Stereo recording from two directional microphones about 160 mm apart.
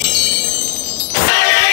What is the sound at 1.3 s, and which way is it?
Vehicle, 90° left.